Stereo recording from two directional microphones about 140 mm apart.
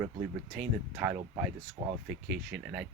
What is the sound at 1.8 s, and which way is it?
Speech, 55° right (ahead or behind).